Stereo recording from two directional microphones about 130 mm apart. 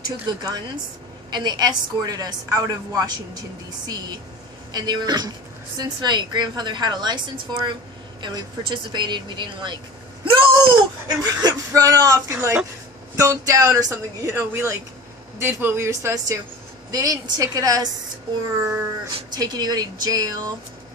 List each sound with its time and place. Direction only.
0.3 s a woman's voice: 30° right (ahead or behind)
4.7 s a woman's voice: 35° right (ahead or behind)
10.2 s a sound: 40° right (ahead or behind)
11.1 s speech: 30° right (ahead or behind)
19.1 s a woman's voice: 30° right (ahead or behind)